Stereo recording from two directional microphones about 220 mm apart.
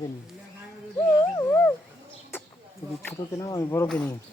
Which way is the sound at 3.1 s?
15° left (ahead or behind).